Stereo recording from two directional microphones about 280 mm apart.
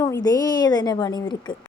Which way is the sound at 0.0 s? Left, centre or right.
Centre.